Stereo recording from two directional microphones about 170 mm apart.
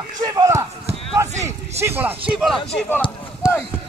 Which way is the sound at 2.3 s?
Centre (ahead or behind).